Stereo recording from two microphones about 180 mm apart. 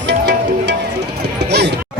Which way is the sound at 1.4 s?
70° right (ahead or behind).